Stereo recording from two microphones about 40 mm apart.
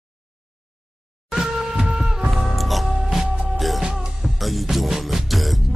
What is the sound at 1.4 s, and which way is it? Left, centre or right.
Music, centre.